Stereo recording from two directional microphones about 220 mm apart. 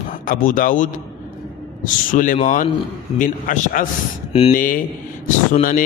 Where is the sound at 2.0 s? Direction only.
35° left (ahead or behind).